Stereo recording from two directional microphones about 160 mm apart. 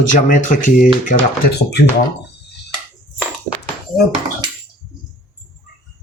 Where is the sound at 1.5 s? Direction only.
90° left.